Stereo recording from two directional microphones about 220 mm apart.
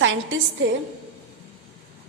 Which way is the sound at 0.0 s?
60° right (ahead or behind).